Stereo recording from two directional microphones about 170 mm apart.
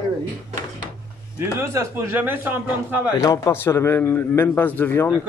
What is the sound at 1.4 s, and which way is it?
A man's voice, 15° right (ahead or behind).